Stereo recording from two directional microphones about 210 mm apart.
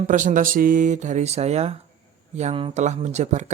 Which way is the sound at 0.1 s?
40° right (ahead or behind).